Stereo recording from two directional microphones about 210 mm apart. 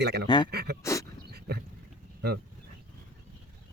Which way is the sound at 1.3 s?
50° right (ahead or behind).